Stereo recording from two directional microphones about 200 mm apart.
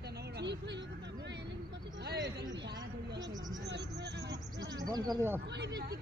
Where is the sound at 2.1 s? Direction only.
60° right (ahead or behind).